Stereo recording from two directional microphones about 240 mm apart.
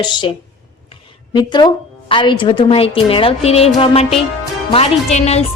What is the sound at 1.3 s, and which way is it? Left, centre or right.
A woman's voice, centre.